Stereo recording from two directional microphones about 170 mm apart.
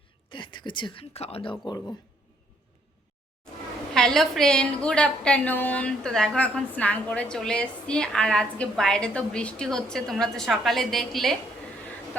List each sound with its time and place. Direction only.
0.3 s speech: 30° left (ahead or behind)
3.9 s a woman's voice: 5° left (ahead or behind)